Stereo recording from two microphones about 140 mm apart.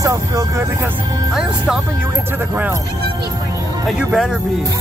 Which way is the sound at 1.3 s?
5° right (ahead or behind).